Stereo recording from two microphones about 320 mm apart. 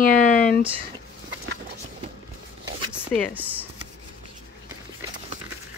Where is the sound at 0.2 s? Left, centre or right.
Left.